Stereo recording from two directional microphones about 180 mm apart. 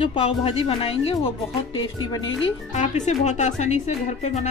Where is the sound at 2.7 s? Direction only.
40° left (ahead or behind).